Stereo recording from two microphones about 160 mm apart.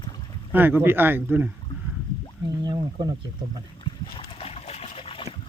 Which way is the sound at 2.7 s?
25° right (ahead or behind).